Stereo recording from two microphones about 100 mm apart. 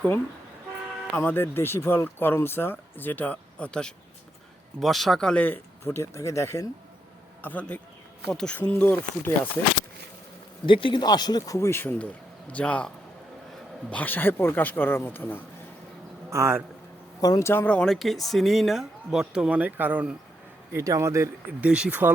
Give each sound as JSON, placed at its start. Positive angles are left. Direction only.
{"t": 1.1, "sound": "speech", "side_deg": 20}
{"t": 5.8, "sound": "speech", "side_deg": 25}
{"t": 7.4, "sound": "speech", "side_deg": 15}
{"t": 10.7, "sound": "speech", "side_deg": 60}
{"t": 13.9, "sound": "speech", "side_deg": 15}
{"t": 16.3, "sound": "a man's voice", "side_deg": -25}
{"t": 17.2, "sound": "speech", "side_deg": 35}
{"t": 17.5, "sound": "speech", "side_deg": 20}
{"t": 17.7, "sound": "speech", "side_deg": 0}
{"t": 20.7, "sound": "a man's voice", "side_deg": -30}
{"t": 21.6, "sound": "speech", "side_deg": -10}